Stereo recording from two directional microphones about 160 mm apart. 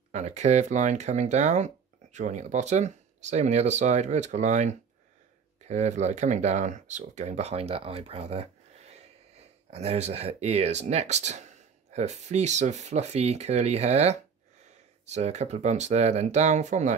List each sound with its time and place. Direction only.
0.1 s speech: 45° right (ahead or behind)